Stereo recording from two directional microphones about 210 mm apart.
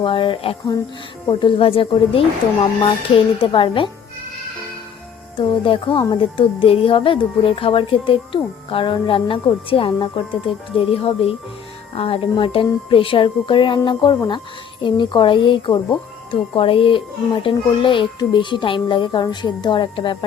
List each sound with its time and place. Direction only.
0.0 s a woman's voice: 25° left (ahead or behind)
3.4 s a woman's voice: 25° left (ahead or behind)
5.4 s a woman's voice: 25° left (ahead or behind)